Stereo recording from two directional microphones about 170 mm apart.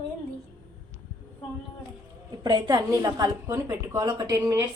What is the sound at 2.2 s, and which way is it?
A woman's voice, 25° right (ahead or behind).